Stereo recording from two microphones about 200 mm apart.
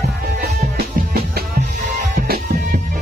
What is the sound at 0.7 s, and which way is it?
Music, 50° right (ahead or behind).